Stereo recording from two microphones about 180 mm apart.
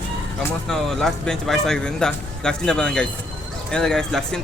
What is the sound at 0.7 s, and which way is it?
Speech, centre (ahead or behind).